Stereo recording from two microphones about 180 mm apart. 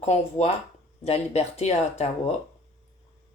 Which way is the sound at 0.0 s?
35° left (ahead or behind).